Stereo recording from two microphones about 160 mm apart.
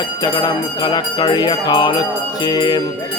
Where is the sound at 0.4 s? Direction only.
25° left (ahead or behind).